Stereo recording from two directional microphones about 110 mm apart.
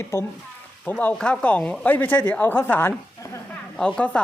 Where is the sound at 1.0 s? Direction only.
10° left (ahead or behind).